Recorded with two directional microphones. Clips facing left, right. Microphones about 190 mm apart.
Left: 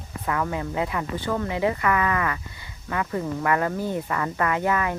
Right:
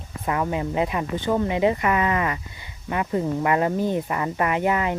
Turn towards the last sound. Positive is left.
turn(degrees=-20)  # may be behind; listen again after turning